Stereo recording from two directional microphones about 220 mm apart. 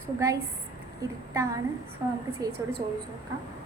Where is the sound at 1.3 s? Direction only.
15° right (ahead or behind).